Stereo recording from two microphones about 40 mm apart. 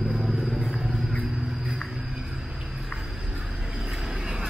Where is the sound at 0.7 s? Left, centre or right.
Centre.